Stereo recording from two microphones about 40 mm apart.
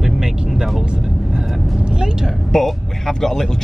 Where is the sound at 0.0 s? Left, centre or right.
Centre.